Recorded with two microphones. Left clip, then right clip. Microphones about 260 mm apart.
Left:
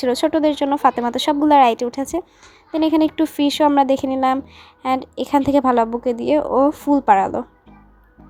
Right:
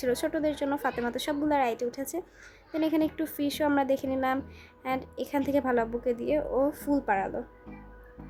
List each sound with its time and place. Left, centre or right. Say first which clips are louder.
0.0 s speech: left 11 dB; left